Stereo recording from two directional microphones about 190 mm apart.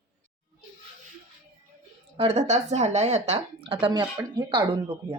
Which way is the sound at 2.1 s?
35° right (ahead or behind).